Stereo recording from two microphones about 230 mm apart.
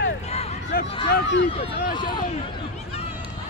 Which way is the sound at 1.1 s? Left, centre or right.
Left.